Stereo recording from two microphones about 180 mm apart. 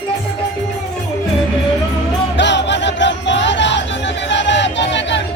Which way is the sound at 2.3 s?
80° left.